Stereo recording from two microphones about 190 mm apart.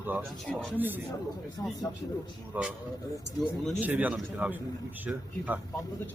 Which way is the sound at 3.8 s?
10° right (ahead or behind).